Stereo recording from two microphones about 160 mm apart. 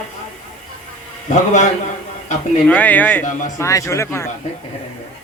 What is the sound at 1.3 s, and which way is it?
Speech, 45° left (ahead or behind).